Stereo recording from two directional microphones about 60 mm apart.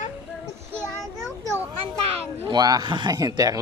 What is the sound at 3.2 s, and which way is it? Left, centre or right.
Speech, right.